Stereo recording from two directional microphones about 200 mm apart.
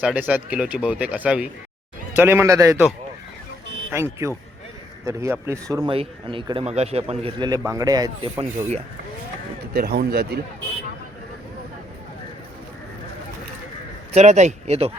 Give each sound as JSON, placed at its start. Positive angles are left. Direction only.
{"t": 0.0, "sound": "speech", "side_deg": -5}
{"t": 3.9, "sound": "a man's voice", "side_deg": -15}
{"t": 9.7, "sound": "speech", "side_deg": -50}
{"t": 14.1, "sound": "speech", "side_deg": -35}